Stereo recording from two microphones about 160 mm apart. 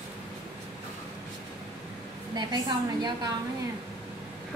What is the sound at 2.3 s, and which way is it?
Speech, 25° right (ahead or behind).